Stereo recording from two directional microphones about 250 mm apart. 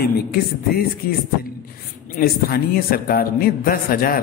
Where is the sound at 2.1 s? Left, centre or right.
Left.